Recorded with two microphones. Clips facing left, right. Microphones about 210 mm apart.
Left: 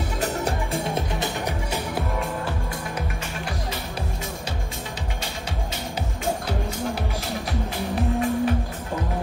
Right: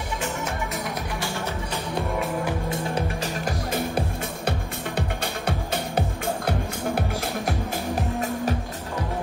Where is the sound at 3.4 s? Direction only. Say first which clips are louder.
Right 6 dB; 50° right (ahead or behind).